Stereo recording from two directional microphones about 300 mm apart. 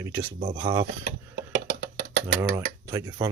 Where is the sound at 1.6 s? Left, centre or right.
Right.